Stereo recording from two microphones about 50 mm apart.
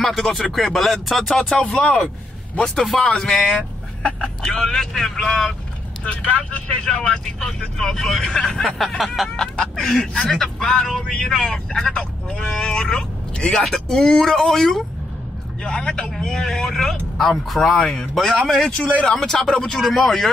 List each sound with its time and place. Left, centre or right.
0.0 s speech: centre
1.4 s speech: left
2.6 s speech: centre
3.0 s speech: left
3.5 s a sound: centre
4.5 s speech: centre
6.0 s speech: left
6.8 s speech: centre
8.6 s speech: centre
9.8 s speech: centre
19.8 s speech: centre